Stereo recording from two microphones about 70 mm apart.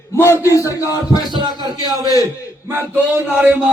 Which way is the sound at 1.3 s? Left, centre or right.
Right.